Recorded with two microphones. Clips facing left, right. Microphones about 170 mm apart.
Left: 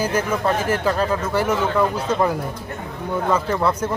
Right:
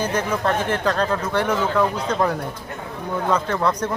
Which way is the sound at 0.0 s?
10° left (ahead or behind).